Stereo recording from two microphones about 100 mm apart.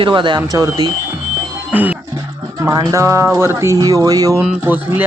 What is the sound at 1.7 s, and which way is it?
Speech, 15° right (ahead or behind).